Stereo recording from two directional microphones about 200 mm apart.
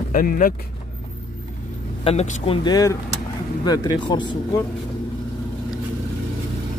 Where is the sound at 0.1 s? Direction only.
45° left (ahead or behind).